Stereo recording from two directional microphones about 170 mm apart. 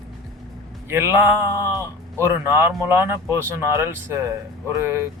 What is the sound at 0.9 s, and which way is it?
A man's voice, 15° right (ahead or behind).